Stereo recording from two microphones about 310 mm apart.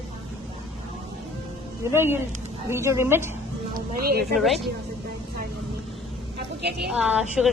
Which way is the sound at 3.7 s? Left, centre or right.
Right.